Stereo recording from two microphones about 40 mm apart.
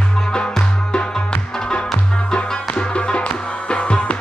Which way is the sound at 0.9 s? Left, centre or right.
Left.